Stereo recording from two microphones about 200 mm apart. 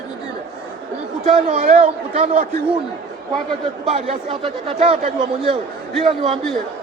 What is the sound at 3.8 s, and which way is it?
Speech, 30° right (ahead or behind).